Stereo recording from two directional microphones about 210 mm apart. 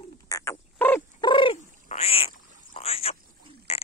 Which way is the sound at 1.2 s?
25° left (ahead or behind).